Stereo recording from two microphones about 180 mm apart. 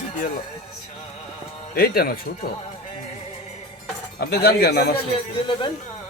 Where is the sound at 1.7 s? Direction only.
60° left (ahead or behind).